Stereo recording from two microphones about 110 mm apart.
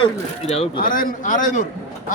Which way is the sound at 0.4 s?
65° left (ahead or behind).